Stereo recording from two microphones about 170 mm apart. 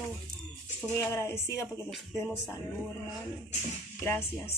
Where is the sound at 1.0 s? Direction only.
15° left (ahead or behind).